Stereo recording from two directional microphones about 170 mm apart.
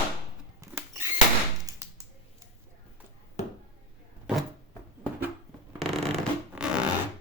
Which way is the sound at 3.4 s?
40° left (ahead or behind).